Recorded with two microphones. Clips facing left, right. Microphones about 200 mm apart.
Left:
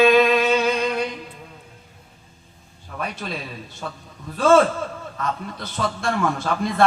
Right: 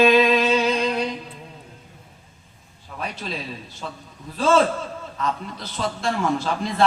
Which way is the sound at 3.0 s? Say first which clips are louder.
Left 1 dB; 55° left (ahead or behind).